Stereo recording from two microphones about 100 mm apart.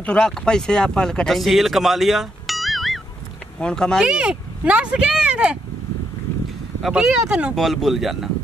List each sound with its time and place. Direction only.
0.0 s speech: 10° left (ahead or behind)
4.0 s speech: 10° right (ahead or behind)
6.8 s speech: 10° right (ahead or behind)